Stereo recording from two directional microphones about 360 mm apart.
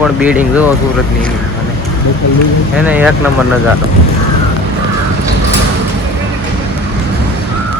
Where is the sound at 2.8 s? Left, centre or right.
Centre.